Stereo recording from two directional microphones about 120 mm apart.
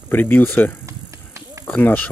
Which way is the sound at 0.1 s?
15° left (ahead or behind).